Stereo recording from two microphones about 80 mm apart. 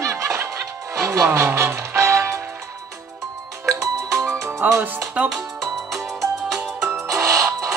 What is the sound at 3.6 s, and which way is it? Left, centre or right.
Music, right.